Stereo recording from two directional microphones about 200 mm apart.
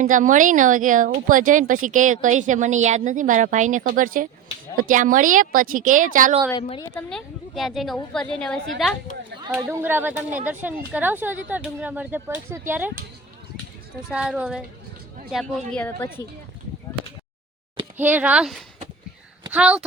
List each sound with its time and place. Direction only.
0.0 s speech: 40° right (ahead or behind)
6.5 s a woman's voice: 25° left (ahead or behind)
6.9 s speech: 5° left (ahead or behind)
14.1 s a woman's voice: 5° right (ahead or behind); by 16.2 s 10° left (ahead or behind)
17.9 s speech: 10° right (ahead or behind)